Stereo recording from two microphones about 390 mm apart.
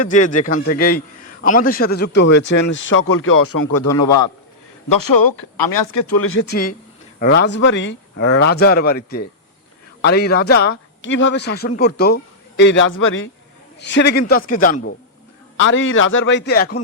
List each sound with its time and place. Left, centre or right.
0.0 s a man's voice: centre; by 3.9 s left
4.9 s a man's voice: left